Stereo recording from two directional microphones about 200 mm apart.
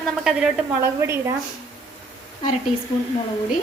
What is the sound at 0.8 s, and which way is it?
Speech, 15° right (ahead or behind).